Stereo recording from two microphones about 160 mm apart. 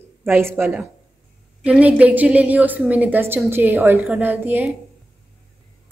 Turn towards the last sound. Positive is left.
turn(degrees=-10)  # may be behind; listen again after turning